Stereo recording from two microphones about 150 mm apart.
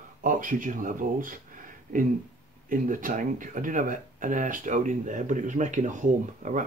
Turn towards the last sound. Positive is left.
turn(degrees=-55)  # may be behind; listen again after turning